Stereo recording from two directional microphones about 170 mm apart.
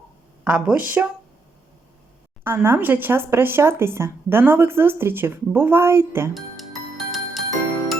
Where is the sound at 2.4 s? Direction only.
15° right (ahead or behind).